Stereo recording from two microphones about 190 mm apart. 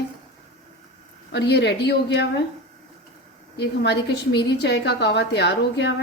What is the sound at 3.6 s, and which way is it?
A woman's voice, 65° left (ahead or behind).